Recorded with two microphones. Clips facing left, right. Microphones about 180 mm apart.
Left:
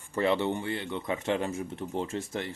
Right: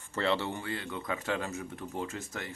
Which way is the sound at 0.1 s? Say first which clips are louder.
Left 4 dB; 15° left (ahead or behind).